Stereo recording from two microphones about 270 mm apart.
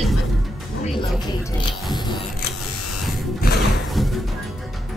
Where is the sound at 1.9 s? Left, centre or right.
Centre.